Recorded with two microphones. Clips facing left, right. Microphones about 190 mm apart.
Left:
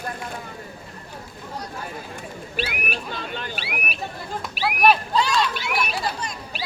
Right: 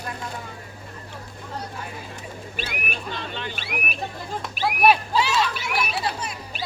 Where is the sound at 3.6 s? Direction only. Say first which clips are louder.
Even; 45° right (ahead or behind).